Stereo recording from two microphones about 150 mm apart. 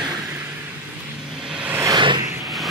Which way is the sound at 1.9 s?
30° right (ahead or behind).